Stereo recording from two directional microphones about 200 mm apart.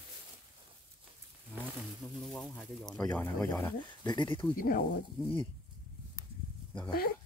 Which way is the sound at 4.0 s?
20° left (ahead or behind).